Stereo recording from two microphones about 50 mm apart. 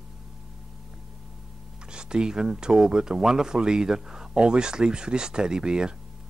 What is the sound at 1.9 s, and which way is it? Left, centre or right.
Speech, centre.